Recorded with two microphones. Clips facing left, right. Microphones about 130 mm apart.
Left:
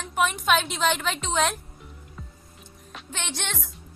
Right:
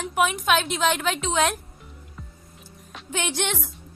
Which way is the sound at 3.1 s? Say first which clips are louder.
Right 7 dB; 10° right (ahead or behind).